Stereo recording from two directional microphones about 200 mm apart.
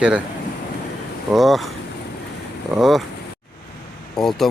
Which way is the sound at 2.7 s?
Centre (ahead or behind).